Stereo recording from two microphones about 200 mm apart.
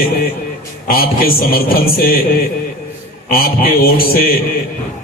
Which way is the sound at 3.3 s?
45° left (ahead or behind).